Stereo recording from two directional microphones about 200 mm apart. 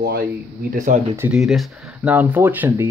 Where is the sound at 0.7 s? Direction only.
40° right (ahead or behind).